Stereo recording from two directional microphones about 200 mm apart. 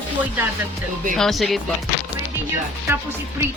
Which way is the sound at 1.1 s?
Centre (ahead or behind).